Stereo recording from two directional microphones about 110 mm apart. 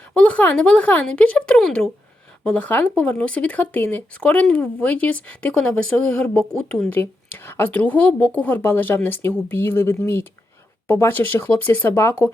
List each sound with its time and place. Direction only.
0.1 s speech: 10° left (ahead or behind)
6.9 s speech: 20° left (ahead or behind)